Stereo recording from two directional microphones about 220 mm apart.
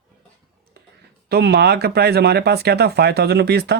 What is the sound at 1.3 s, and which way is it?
Speech, 50° right (ahead or behind).